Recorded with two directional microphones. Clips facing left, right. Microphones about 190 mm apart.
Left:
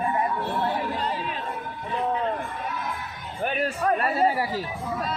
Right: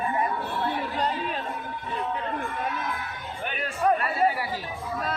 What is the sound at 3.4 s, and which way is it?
Chatter, 40° left (ahead or behind).